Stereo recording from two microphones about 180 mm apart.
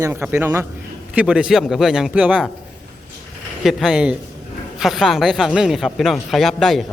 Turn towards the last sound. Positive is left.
turn(degrees=0)  # may be behind; listen again after turning